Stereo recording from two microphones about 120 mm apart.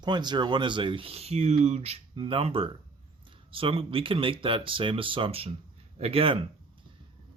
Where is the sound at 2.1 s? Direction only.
45° right (ahead or behind).